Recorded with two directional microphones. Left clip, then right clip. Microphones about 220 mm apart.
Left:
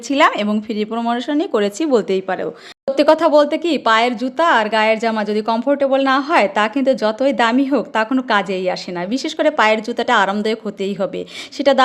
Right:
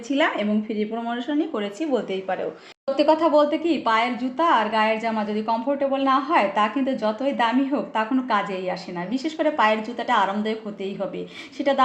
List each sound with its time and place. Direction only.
0.1 s speech: 45° left (ahead or behind)